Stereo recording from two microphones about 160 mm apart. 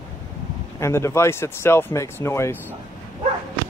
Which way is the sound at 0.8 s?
15° left (ahead or behind).